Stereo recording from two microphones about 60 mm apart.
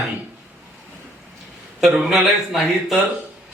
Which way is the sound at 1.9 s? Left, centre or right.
Centre.